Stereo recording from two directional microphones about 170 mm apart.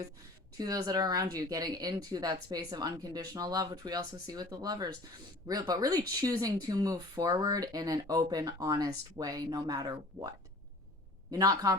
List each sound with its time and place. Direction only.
0.5 s speech: 20° right (ahead or behind)